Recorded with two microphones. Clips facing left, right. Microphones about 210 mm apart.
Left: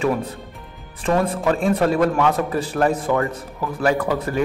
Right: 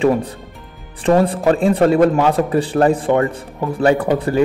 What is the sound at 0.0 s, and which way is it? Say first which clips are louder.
A man's voice: right 6 dB; 30° right (ahead or behind).